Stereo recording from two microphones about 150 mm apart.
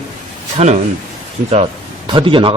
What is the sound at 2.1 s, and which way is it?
Speech, 35° right (ahead or behind).